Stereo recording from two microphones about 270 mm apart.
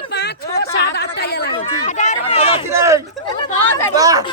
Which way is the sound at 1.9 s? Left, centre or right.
Left.